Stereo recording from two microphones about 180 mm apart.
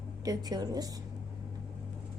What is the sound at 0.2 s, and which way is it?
Speech, 20° right (ahead or behind).